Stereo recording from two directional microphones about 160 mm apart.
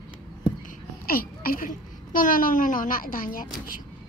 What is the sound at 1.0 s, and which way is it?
A child's voice, 65° left (ahead or behind).